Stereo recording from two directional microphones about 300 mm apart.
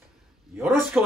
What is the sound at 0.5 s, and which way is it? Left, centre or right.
Speech, centre.